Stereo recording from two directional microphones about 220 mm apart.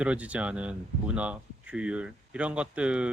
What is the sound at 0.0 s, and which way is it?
Speech, 5° right (ahead or behind).